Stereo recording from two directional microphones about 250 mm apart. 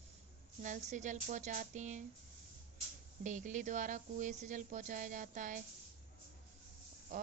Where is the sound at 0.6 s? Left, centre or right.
Right.